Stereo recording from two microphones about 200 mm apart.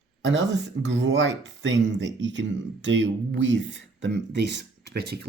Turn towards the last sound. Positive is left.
turn(degrees=-55)  # may be behind; listen again after turning